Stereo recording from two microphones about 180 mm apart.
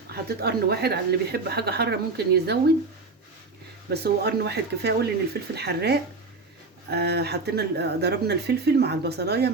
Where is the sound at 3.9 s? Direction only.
65° right (ahead or behind).